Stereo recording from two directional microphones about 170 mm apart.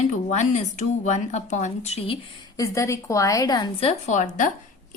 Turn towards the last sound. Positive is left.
turn(degrees=45)  # may be behind; listen again after turning